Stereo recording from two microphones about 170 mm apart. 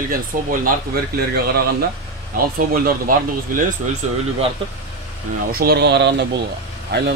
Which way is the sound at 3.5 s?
50° right (ahead or behind).